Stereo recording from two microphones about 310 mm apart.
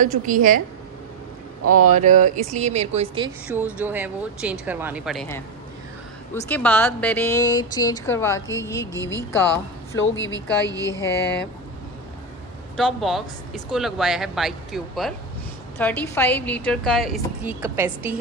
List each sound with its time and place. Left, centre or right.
0.0 s speech: right
1.6 s speech: right
1.9 s speech: right
3.4 s a woman's voice: centre
6.5 s speech: centre
9.9 s a woman's voice: left
10.9 s speech: centre
12.7 s a woman's voice: centre